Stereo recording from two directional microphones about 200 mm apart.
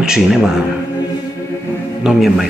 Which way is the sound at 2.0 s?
Centre (ahead or behind).